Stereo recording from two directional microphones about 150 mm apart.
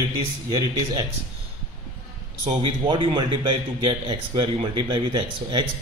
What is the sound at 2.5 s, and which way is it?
A man's voice, 35° right (ahead or behind).